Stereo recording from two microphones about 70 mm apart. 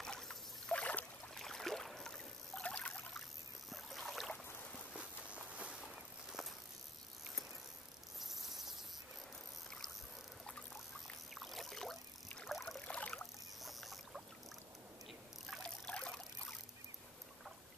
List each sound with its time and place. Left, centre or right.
0.0 s boat: centre
1.3 s boat: centre
2.6 s a sound: centre
3.7 s rowboat: centre
4.9 s walk: centre
8.2 s cricket: centre
11.3 s rowboat: centre
12.8 s rowboat: centre
13.6 s boat: centre
15.6 s trickle: centre